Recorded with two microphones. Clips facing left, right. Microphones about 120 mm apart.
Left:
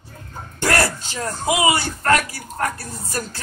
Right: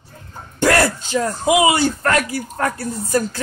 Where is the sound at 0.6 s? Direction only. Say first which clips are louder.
Right 4 dB; 25° right (ahead or behind).